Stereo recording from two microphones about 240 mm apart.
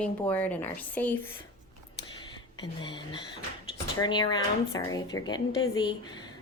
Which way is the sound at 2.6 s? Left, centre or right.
Centre.